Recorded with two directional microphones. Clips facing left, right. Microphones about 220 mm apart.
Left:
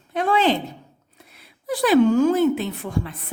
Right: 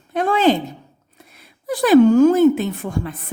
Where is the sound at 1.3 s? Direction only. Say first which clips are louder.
Right 2 dB; 45° right (ahead or behind).